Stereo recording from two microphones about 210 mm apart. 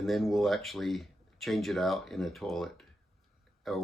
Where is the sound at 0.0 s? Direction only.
Centre (ahead or behind).